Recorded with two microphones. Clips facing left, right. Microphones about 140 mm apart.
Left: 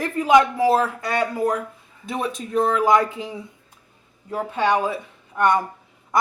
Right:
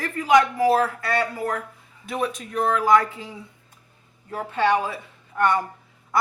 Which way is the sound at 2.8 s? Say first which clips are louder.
Left 1 dB; 20° left (ahead or behind).